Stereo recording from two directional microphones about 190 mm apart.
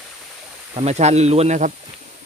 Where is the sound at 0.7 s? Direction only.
35° right (ahead or behind).